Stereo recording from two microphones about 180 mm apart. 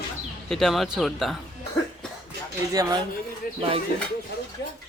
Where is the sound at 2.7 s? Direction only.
20° right (ahead or behind).